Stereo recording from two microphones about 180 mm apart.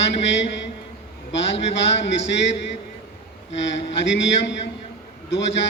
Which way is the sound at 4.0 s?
75° left (ahead or behind).